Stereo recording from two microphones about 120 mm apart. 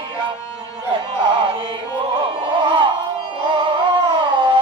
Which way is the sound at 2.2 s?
45° right (ahead or behind).